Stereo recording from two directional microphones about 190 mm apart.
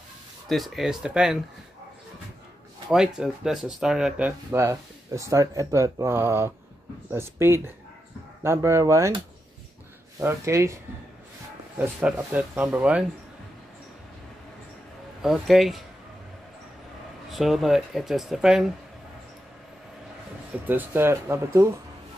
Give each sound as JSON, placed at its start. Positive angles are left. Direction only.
{"t": 0.5, "sound": "speech", "side_deg": 0}
{"t": 3.2, "sound": "speech", "side_deg": 0}
{"t": 10.2, "sound": "speech", "side_deg": -15}
{"t": 11.8, "sound": "speech", "side_deg": -5}
{"t": 15.2, "sound": "speech", "side_deg": 0}
{"t": 17.3, "sound": "speech", "side_deg": 0}
{"t": 20.6, "sound": "speech", "side_deg": -10}